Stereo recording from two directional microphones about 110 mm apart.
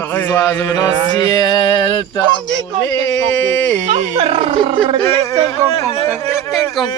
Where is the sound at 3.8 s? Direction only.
90° right; by 4.7 s 60° right (ahead or behind).